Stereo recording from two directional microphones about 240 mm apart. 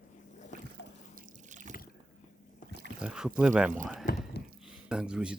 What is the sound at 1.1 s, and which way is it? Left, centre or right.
Water, right.